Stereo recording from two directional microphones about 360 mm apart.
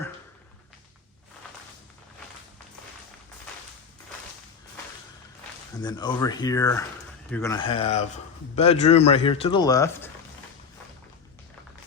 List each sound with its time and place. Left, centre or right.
5.8 s a man's voice: centre